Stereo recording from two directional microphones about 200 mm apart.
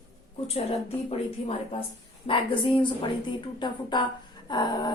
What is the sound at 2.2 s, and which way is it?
Speech, 25° left (ahead or behind).